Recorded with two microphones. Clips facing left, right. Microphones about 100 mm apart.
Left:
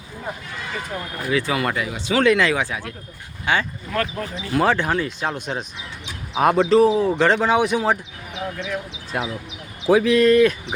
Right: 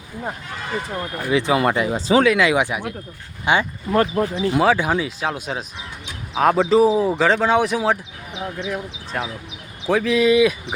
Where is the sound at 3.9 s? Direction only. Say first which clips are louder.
Right 9 dB; 30° right (ahead or behind).